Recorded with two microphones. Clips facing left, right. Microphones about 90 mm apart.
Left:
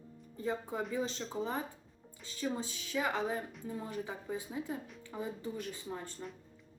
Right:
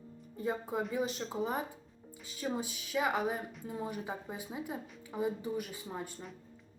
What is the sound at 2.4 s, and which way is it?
Speech, 15° right (ahead or behind).